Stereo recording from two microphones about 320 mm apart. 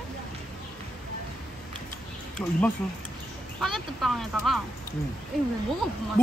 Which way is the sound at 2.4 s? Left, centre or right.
Centre.